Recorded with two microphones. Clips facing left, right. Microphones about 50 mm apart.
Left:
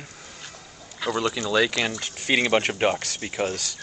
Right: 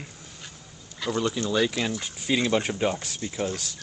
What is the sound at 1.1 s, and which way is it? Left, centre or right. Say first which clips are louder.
Speech: left 1 dB; left.